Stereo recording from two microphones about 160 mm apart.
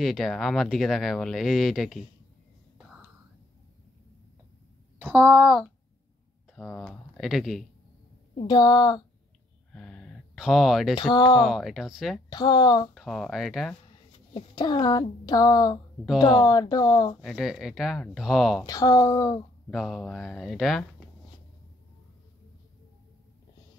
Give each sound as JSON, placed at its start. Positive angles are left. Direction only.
{"t": 0.0, "sound": "speech", "side_deg": 0}
{"t": 5.1, "sound": "a child's voice", "side_deg": -10}
{"t": 6.5, "sound": "speech", "side_deg": 5}
{"t": 8.5, "sound": "a woman's voice", "side_deg": 30}
{"t": 9.7, "sound": "a sound", "side_deg": 5}
{"t": 11.0, "sound": "a woman's voice", "side_deg": 25}
{"t": 11.4, "sound": "speech", "side_deg": 0}
{"t": 12.3, "sound": "a woman's voice", "side_deg": 25}
{"t": 12.9, "sound": "speech", "side_deg": 0}
{"t": 14.3, "sound": "a woman's voice", "side_deg": 25}
{"t": 17.2, "sound": "speech", "side_deg": 0}
{"t": 18.7, "sound": "a woman's voice", "side_deg": 20}
{"t": 19.7, "sound": "speech", "side_deg": 0}